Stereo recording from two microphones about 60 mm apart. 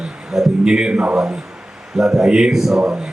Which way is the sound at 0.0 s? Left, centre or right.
Centre.